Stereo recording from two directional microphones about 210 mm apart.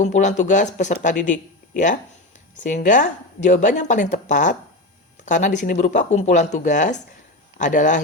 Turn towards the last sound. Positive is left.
turn(degrees=35)  # may be behind; listen again after turning